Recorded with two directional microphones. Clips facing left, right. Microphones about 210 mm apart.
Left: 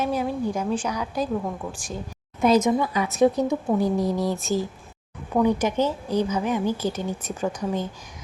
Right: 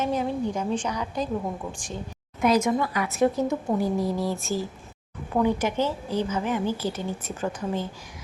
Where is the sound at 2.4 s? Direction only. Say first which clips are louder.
Left 3 dB; 25° left (ahead or behind).